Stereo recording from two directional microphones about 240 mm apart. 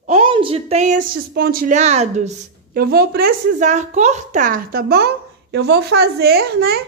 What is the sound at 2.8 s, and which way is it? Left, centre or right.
Speech, right.